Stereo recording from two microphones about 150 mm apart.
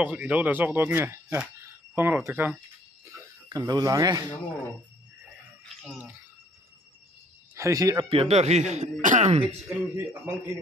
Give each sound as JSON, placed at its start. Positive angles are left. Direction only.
{"t": 0.0, "sound": "speech", "side_deg": -10}
{"t": 3.1, "sound": "speech", "side_deg": -25}
{"t": 5.8, "sound": "speech", "side_deg": -5}
{"t": 7.5, "sound": "speech", "side_deg": -20}
{"t": 8.1, "sound": "speech", "side_deg": -40}
{"t": 9.8, "sound": "speech", "side_deg": -20}